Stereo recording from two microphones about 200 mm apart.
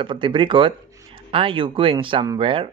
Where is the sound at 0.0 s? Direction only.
25° right (ahead or behind).